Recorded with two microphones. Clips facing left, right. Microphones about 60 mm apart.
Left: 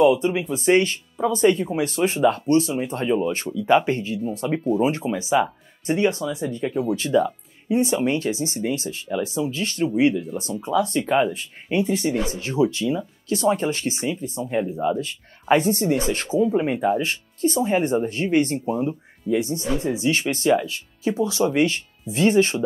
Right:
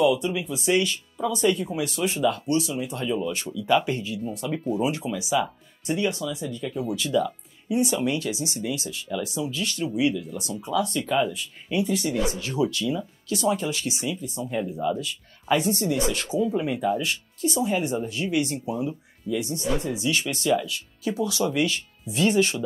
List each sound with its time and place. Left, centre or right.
0.0 s speech: left
14.4 s speech: left
17.0 s speech: left